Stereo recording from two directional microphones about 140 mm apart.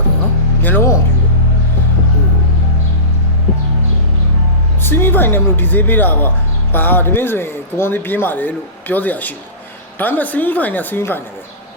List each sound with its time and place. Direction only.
0.6 s a man's voice: 15° left (ahead or behind)
4.8 s a man's voice: 15° left (ahead or behind)